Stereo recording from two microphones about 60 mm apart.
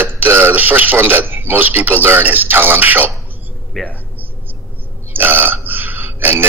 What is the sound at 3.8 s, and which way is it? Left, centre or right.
Speech, centre.